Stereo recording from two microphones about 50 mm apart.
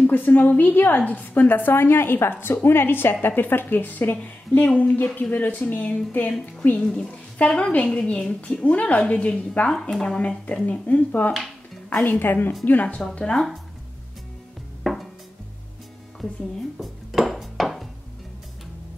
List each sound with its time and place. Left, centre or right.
0.0 s a woman's voice: left
6.8 s speech: centre
7.3 s a woman's voice: left
7.8 s a woman's voice: centre
9.7 s speech: centre
10.0 s a woman's voice: centre; by 12.5 s left
13.2 s speech: centre
14.8 s music: centre
16.8 s dishes: centre